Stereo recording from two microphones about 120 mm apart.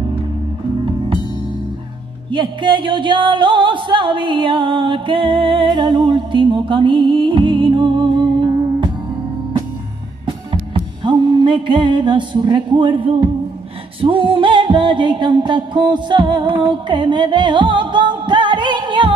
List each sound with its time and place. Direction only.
2.3 s music: 45° right (ahead or behind)
10.2 s music: 45° right (ahead or behind)